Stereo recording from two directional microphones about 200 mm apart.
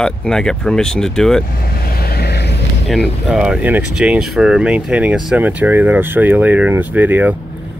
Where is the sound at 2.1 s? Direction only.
55° left (ahead or behind).